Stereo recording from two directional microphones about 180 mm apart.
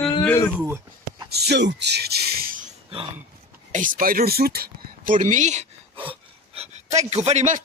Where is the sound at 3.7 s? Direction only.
50° right (ahead or behind).